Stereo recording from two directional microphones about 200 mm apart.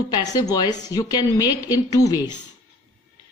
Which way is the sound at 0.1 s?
20° left (ahead or behind).